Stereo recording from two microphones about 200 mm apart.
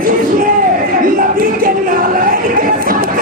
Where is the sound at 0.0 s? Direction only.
45° right (ahead or behind).